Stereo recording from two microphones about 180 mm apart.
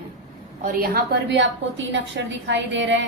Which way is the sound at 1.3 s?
85° right.